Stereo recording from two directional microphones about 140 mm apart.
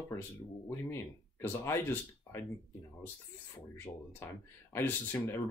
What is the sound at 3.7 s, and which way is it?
Speech, 15° left (ahead or behind).